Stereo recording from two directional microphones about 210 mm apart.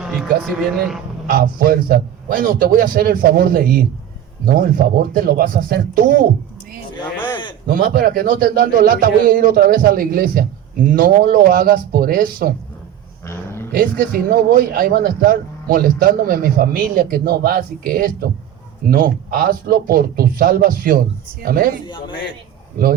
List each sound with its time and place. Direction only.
0.0 s vehicle: centre (ahead or behind)
0.8 s speech: centre (ahead or behind)
1.3 s a man's voice: 45° right (ahead or behind)
7.7 s a man's voice: 45° right (ahead or behind)
13.2 s roaring cats: 10° left (ahead or behind)
13.7 s a man's voice: 45° right (ahead or behind)
21.8 s a man's voice: 20° left (ahead or behind)